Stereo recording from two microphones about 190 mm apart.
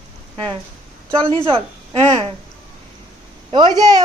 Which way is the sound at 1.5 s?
30° right (ahead or behind).